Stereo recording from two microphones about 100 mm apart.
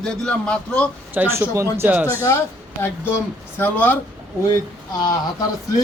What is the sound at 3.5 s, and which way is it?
Speech, 20° left (ahead or behind).